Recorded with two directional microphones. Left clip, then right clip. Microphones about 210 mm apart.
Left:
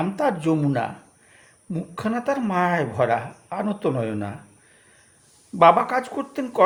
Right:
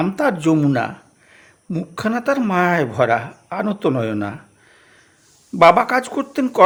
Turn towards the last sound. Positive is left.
turn(degrees=-40)  # may be behind; listen again after turning